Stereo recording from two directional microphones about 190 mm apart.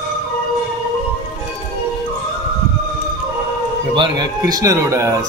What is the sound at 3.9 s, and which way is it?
Music, 25° right (ahead or behind).